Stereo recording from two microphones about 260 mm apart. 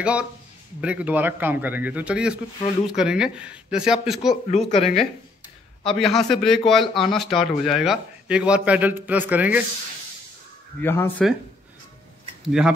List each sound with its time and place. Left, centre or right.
0.0 s a man's voice: centre
4.5 s speech: left
5.9 s a man's voice: centre
10.8 s speech: centre
12.4 s a man's voice: centre